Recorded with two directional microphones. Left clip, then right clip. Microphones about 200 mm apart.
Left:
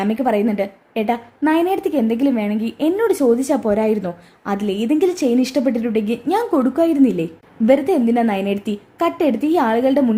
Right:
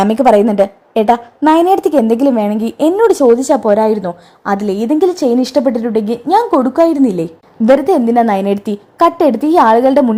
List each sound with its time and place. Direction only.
0.0 s a woman's voice: 25° right (ahead or behind)